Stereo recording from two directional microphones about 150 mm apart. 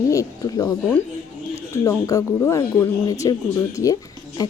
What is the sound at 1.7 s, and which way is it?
Speech, 20° left (ahead or behind).